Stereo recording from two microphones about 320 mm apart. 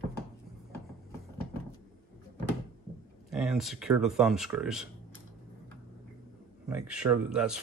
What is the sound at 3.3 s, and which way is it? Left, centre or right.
Speech, centre.